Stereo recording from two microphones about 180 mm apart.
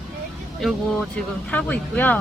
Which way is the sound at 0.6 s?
Centre (ahead or behind).